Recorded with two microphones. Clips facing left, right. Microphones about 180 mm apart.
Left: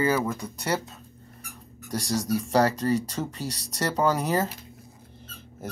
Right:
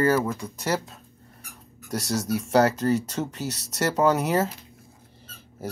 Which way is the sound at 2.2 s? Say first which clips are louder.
Left 1 dB; 30° left (ahead or behind).